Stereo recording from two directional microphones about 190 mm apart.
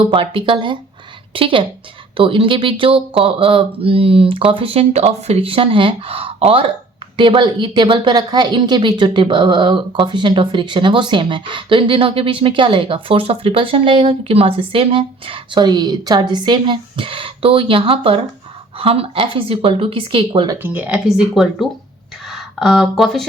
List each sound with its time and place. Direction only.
0.0 s speech: 30° right (ahead or behind)
20.6 s speech: 10° right (ahead or behind)